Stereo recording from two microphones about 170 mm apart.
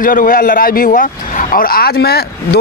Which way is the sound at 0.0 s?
55° left (ahead or behind).